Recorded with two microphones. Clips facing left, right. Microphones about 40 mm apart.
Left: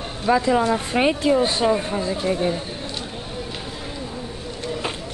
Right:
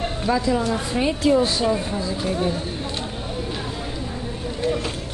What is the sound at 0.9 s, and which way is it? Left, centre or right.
Speech, left.